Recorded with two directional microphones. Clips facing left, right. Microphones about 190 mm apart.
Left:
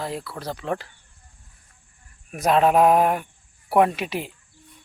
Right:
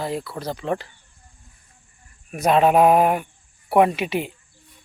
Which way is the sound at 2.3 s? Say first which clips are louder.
Right 2 dB; centre (ahead or behind).